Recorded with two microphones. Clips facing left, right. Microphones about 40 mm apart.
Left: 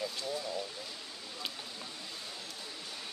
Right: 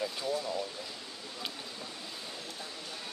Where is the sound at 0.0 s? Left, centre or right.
Centre.